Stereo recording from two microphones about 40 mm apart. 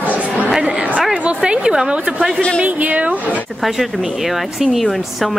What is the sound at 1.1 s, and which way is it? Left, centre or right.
A woman's voice, right.